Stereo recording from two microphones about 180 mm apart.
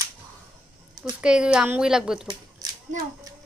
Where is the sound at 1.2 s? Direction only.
5° right (ahead or behind).